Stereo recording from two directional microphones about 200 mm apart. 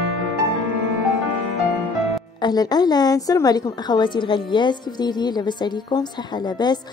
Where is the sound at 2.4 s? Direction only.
20° left (ahead or behind).